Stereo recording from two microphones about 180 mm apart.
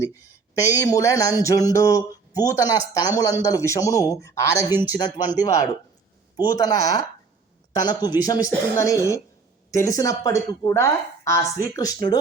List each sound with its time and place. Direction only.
0.0 s speech: 15° left (ahead or behind)
4.7 s speech: 10° right (ahead or behind)
4.9 s speech: 25° left (ahead or behind)